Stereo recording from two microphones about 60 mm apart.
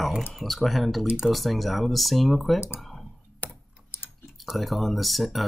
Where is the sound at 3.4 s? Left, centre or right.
Left.